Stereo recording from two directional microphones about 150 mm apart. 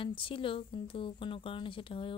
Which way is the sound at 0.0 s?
35° left (ahead or behind).